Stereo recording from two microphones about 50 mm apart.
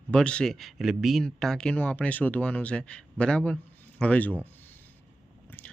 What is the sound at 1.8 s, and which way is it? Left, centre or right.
Speech, left.